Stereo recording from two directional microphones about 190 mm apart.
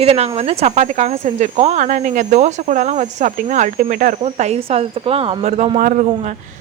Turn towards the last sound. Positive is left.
turn(degrees=-40)  # may be behind; listen again after turning